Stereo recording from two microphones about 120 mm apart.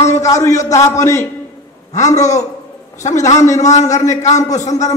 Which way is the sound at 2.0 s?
75° left (ahead or behind).